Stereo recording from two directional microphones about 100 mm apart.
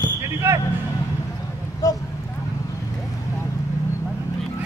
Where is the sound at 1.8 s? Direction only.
35° left (ahead or behind).